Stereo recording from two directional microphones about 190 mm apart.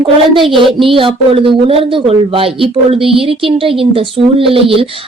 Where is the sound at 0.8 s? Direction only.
30° right (ahead or behind).